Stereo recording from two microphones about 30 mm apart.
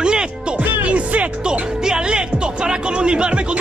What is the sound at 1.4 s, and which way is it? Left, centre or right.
Music, right.